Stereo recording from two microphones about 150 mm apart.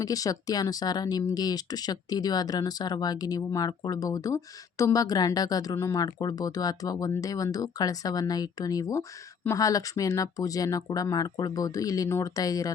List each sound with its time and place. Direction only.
0.0 s speech: 25° left (ahead or behind)